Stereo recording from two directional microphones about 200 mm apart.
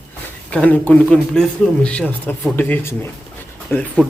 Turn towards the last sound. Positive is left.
turn(degrees=10)  # may be behind; listen again after turning